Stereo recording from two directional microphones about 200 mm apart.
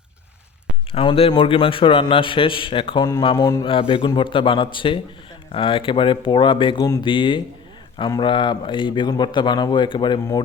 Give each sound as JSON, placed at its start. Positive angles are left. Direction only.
{"t": 0.9, "sound": "a man's voice", "side_deg": 30}